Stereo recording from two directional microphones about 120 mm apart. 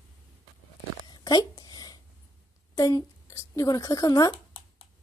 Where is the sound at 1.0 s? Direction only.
35° left (ahead or behind).